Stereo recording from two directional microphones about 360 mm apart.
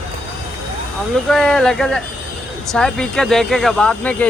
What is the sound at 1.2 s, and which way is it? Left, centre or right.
Speech, centre.